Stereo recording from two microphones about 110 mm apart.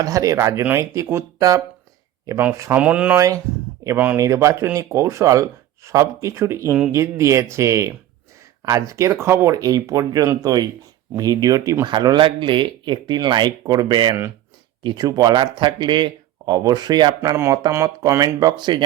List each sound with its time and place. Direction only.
0.0 s speech: 30° right (ahead or behind); by 3.2 s 15° right (ahead or behind)
3.2 s speech: 30° right (ahead or behind)
3.9 s speech: 15° right (ahead or behind)
4.2 s speech: 25° right (ahead or behind)
17.3 s speech: 25° right (ahead or behind)
18.1 s speech: 35° right (ahead or behind)